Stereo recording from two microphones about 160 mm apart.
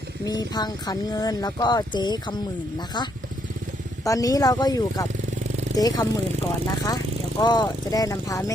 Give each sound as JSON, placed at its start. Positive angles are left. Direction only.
{"t": 0.3, "sound": "speech", "side_deg": 25}